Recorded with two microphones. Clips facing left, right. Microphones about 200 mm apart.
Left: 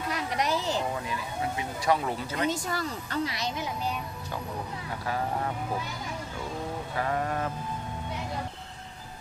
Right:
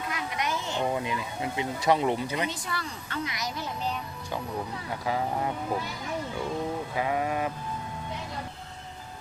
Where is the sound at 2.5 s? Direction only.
45° left (ahead or behind).